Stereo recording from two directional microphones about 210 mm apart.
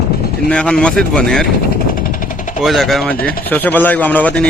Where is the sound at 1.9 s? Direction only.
40° left (ahead or behind).